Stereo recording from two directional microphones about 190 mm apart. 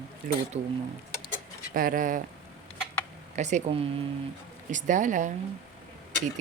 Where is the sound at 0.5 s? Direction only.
35° right (ahead or behind).